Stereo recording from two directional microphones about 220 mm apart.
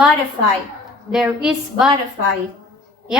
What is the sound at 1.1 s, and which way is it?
Speech, 5° right (ahead or behind).